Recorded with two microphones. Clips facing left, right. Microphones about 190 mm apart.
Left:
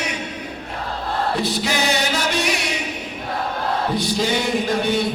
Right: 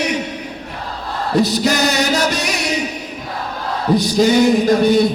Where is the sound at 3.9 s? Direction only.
40° right (ahead or behind).